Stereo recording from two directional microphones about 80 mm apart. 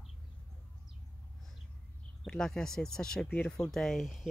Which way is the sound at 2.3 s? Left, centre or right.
Centre.